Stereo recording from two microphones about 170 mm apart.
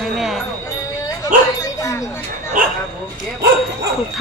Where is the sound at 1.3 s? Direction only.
55° right (ahead or behind).